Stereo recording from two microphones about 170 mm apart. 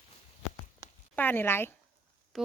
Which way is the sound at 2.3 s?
Centre (ahead or behind).